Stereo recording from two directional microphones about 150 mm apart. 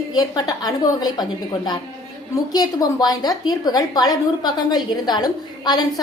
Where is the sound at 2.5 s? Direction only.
25° left (ahead or behind).